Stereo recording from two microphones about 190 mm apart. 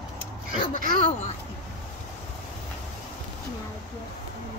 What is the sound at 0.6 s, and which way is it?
Speech, 45° left (ahead or behind).